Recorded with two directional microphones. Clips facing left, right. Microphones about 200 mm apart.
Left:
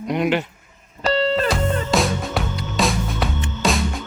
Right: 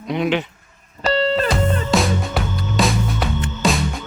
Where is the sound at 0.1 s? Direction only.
10° left (ahead or behind).